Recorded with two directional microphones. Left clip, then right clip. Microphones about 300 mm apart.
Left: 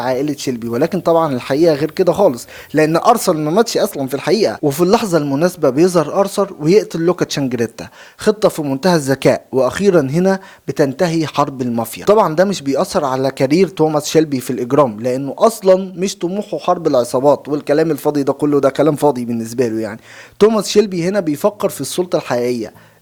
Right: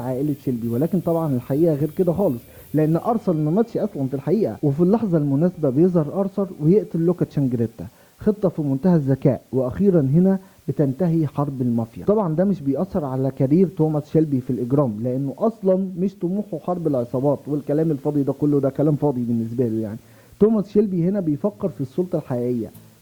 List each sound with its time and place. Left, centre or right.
0.0 s speech: centre
5.2 s speech: centre
16.2 s speech: left
16.6 s speech: centre